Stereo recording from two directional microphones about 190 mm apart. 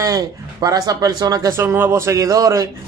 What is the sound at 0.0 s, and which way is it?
Speech, 20° right (ahead or behind).